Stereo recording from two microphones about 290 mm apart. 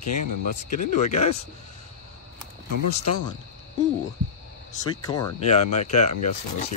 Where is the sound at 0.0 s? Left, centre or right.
Left.